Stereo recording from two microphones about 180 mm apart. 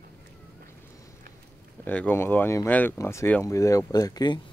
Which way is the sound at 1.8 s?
10° left (ahead or behind).